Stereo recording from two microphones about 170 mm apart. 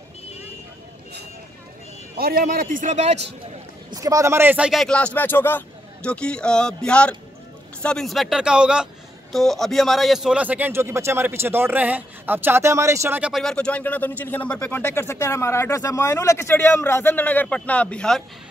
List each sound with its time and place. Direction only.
2.1 s a man's voice: 60° right (ahead or behind); by 3.3 s 40° right (ahead or behind)
3.9 s a man's voice: 20° right (ahead or behind)
13.3 s speech: 5° left (ahead or behind)